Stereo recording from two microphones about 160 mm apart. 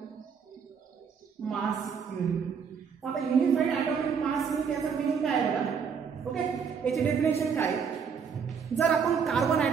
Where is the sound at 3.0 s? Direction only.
Centre (ahead or behind).